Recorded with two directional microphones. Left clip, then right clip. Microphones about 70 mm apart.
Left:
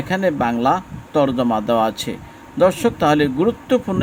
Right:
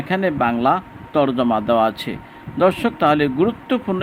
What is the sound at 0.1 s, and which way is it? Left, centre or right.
A man's voice, left.